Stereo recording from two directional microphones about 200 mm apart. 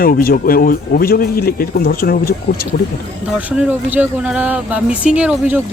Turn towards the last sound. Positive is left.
turn(degrees=-5)  # may be behind; listen again after turning